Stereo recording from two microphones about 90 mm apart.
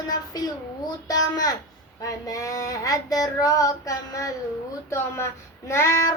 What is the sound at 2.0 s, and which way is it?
A child's voice, 40° left (ahead or behind).